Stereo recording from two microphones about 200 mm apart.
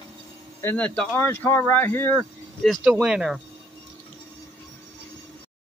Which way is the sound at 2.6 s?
Centre (ahead or behind).